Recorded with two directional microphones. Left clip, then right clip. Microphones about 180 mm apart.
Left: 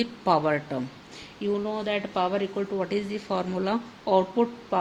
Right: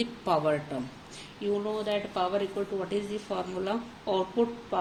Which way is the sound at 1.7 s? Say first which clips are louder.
Left 2 dB; 50° left (ahead or behind).